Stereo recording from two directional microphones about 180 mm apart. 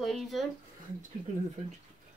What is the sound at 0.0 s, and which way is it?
Speech, centre (ahead or behind).